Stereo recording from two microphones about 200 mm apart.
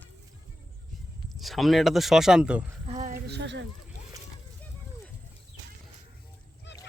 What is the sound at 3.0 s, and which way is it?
Speech, 55° right (ahead or behind).